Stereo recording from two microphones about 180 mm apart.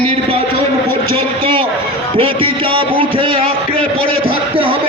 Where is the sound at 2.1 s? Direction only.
30° right (ahead or behind).